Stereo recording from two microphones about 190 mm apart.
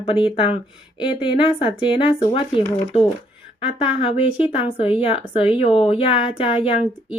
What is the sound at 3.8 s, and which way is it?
Speech, 30° left (ahead or behind).